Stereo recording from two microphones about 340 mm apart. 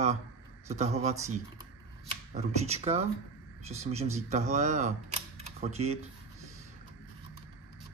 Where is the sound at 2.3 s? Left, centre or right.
Centre.